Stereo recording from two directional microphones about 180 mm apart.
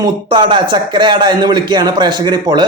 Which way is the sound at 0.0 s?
25° right (ahead or behind).